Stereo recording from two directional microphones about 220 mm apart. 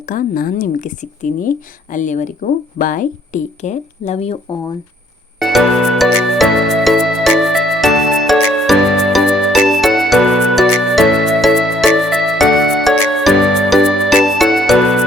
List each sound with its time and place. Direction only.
0.0 s speech: 40° left (ahead or behind)
5.4 s music: centre (ahead or behind)